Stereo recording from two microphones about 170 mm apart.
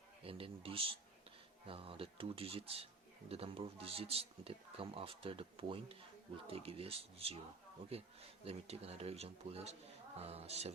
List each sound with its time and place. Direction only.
0.3 s a man's voice: 35° right (ahead or behind)